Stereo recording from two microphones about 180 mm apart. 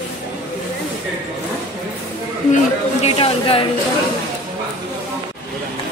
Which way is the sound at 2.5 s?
35° left (ahead or behind).